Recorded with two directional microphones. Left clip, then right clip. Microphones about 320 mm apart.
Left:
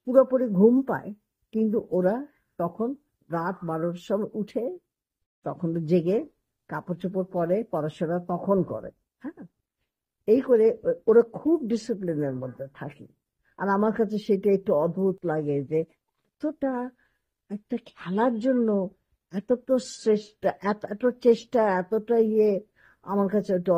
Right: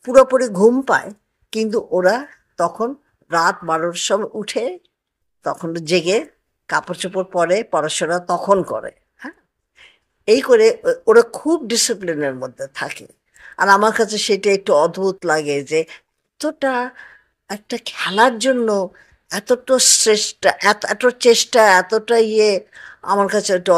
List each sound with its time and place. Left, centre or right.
0.1 s speech: centre
10.4 s speech: centre